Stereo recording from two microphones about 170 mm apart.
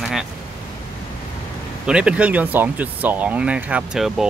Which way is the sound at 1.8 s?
5° right (ahead or behind).